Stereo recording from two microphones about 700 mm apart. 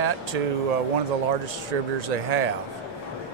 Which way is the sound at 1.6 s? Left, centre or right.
Right.